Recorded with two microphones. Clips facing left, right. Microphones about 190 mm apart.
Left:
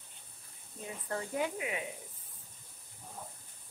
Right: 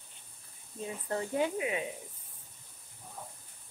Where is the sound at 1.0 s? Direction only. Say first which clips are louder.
Right 3 dB; 25° right (ahead or behind).